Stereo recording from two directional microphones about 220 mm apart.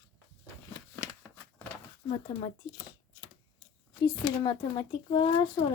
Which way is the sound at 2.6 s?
20° left (ahead or behind).